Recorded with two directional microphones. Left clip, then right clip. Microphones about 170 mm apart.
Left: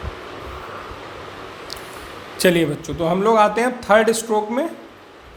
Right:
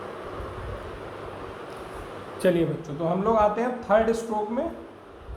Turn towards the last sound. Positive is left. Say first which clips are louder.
# left 7 dB
turn(degrees=55)  # may be behind; listen again after turning